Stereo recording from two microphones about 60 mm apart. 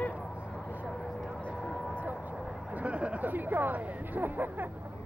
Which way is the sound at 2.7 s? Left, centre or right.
Right.